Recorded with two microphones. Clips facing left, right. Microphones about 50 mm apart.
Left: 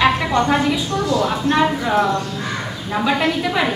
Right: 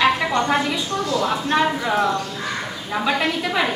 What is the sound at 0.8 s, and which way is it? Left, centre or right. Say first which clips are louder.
Speech: left 3 dB; left.